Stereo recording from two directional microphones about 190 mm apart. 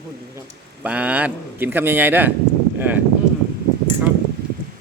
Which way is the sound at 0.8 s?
10° right (ahead or behind).